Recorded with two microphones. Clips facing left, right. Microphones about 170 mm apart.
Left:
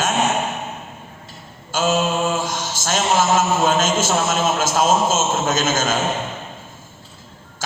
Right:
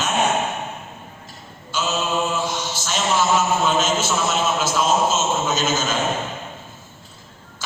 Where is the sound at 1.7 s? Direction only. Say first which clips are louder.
Left 4 dB; 45° left (ahead or behind).